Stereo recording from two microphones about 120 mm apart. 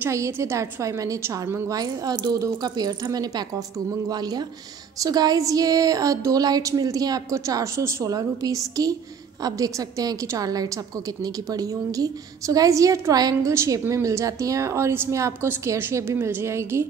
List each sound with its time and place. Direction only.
0.0 s a woman's voice: 25° right (ahead or behind)